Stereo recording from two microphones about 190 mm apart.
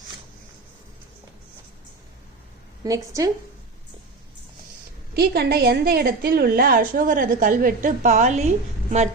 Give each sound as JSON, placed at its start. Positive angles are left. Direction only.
{"t": 2.8, "sound": "a woman's voice", "side_deg": -15}
{"t": 5.1, "sound": "a woman's voice", "side_deg": -55}